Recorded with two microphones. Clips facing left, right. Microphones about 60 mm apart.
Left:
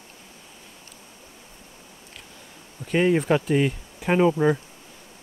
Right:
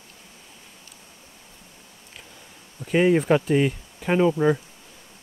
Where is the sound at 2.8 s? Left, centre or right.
Centre.